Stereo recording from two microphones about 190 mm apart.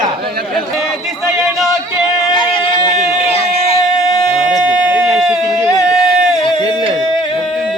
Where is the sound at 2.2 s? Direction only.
25° left (ahead or behind).